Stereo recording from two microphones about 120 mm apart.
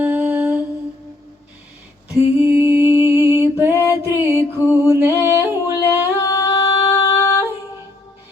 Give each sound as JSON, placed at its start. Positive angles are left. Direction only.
{"t": 0.0, "sound": "humming", "side_deg": -15}
{"t": 2.1, "sound": "a sound", "side_deg": -20}
{"t": 5.2, "sound": "singing", "side_deg": -20}
{"t": 6.1, "sound": "singing", "side_deg": 25}